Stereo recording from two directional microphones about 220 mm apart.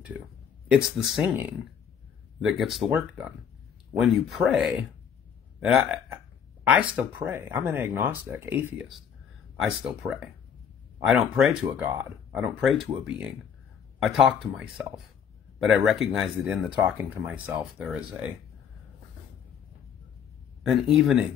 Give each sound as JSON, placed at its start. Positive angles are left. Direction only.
{"t": 0.7, "sound": "speech", "side_deg": 0}
{"t": 13.9, "sound": "speech", "side_deg": 0}
{"t": 15.6, "sound": "speech", "side_deg": 0}
{"t": 20.6, "sound": "speech", "side_deg": 0}